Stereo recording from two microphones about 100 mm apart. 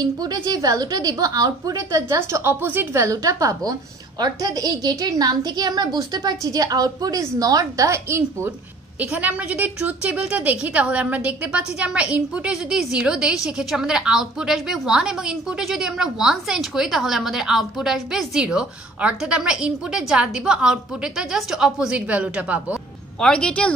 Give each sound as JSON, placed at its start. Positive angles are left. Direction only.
{"t": 0.0, "sound": "a woman's voice", "side_deg": -40}
{"t": 9.0, "sound": "a woman's voice", "side_deg": -15}
{"t": 23.2, "sound": "speech", "side_deg": 10}